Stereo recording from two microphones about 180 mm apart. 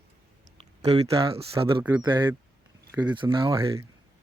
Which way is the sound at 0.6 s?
35° right (ahead or behind).